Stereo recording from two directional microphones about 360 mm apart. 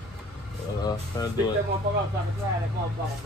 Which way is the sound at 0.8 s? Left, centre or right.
Centre.